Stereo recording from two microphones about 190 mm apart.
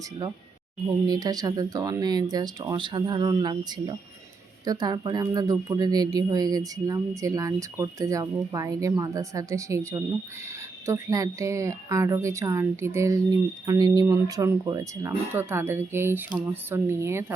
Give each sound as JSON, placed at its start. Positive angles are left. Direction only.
{"t": 1.0, "sound": "speech", "side_deg": -20}